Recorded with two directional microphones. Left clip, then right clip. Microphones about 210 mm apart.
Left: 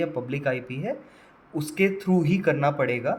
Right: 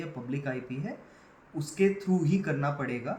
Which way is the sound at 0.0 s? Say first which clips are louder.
Left 10 dB; 45° left (ahead or behind).